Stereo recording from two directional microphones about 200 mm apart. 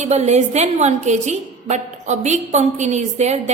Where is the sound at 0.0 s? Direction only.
35° right (ahead or behind).